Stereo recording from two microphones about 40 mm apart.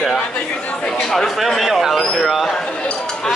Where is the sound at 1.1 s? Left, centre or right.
Centre.